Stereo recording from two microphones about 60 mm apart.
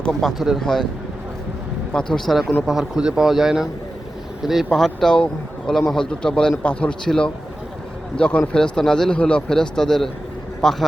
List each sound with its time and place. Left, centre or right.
0.1 s speech: centre
1.9 s speech: centre
2.6 s speech: centre
4.7 s speech: centre
5.1 s speech: centre
5.7 s speech: centre; by 6.9 s left
7.0 s a man's voice: centre